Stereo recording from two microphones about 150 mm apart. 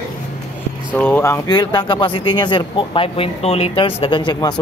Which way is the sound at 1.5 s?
30° left (ahead or behind).